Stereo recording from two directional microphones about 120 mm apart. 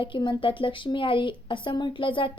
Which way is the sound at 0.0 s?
40° left (ahead or behind).